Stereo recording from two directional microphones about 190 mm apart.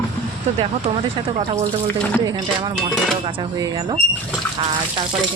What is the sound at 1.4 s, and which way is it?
Speech, 30° right (ahead or behind).